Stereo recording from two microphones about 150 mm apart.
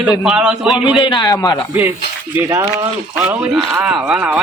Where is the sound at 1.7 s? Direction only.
15° right (ahead or behind).